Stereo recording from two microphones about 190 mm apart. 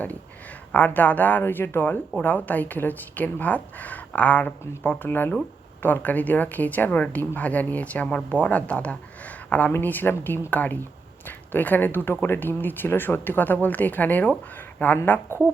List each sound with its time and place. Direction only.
0.7 s speech: 10° left (ahead or behind)